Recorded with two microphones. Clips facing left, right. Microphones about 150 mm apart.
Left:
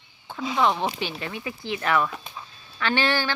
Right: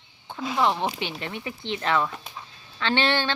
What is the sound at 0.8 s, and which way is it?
Child singing, 20° right (ahead or behind).